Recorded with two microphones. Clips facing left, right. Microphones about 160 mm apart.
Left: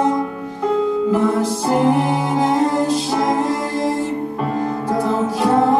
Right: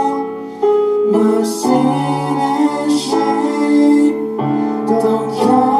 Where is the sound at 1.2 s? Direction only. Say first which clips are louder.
Right 5 dB; 35° right (ahead or behind).